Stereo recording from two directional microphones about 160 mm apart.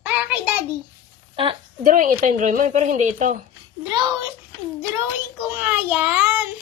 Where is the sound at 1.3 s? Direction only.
35° right (ahead or behind).